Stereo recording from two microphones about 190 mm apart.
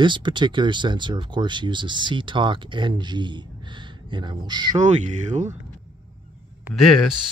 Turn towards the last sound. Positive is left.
turn(degrees=0)  # may be behind; listen again after turning